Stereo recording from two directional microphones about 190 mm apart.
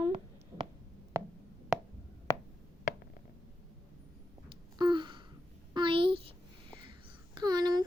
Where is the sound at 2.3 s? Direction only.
15° left (ahead or behind).